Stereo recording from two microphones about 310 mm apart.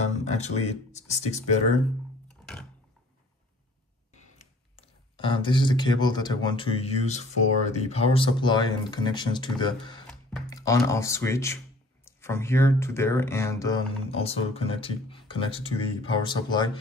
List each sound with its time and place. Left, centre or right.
0.7 s speech: left
2.2 s a sound: centre
4.7 s speech: centre